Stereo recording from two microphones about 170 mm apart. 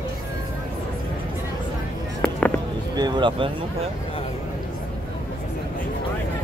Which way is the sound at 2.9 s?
25° right (ahead or behind).